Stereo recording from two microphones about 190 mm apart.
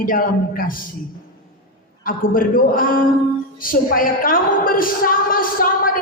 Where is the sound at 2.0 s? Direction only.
45° left (ahead or behind).